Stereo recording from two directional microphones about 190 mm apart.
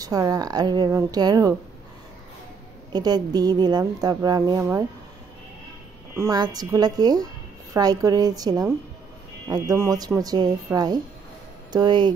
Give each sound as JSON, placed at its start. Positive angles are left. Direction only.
{"t": 0.0, "sound": "speech", "side_deg": -20}
{"t": 2.9, "sound": "speech", "side_deg": -20}
{"t": 6.1, "sound": "speech", "side_deg": -15}